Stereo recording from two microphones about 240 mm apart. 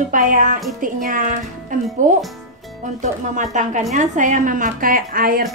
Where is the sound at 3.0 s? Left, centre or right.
Right.